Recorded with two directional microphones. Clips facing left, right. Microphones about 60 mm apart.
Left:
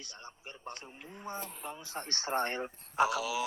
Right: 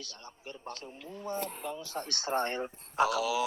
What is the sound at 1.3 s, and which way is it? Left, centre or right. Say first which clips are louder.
Speech: right 5 dB; left.